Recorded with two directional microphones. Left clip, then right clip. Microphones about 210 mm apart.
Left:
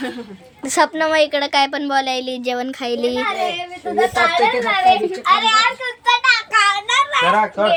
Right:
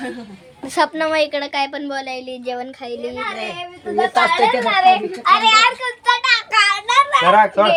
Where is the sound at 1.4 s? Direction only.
30° left (ahead or behind); by 3.2 s 50° left (ahead or behind).